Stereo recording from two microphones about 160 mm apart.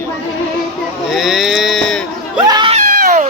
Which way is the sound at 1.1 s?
Centre (ahead or behind).